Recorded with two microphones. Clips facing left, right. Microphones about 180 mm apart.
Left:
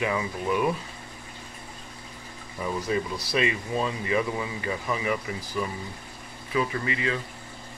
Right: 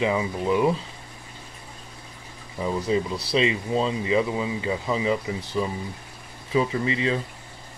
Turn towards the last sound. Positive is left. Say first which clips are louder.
# right 4 dB
turn(degrees=-25)  # may be behind; listen again after turning